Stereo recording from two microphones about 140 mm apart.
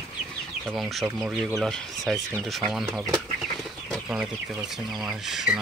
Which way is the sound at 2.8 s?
20° right (ahead or behind).